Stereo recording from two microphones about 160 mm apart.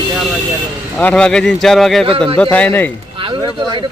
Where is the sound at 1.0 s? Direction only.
5° left (ahead or behind).